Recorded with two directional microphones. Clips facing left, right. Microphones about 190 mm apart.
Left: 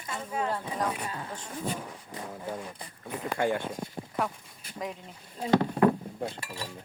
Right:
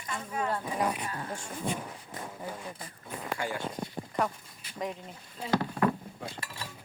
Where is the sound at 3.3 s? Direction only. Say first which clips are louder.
Left 7 dB; 55° left (ahead or behind).